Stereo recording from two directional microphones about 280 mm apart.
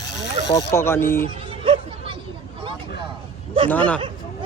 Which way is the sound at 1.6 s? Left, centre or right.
Centre.